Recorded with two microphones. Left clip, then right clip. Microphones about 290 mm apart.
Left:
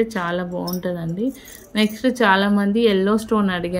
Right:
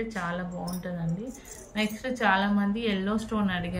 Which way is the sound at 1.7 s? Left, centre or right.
Centre.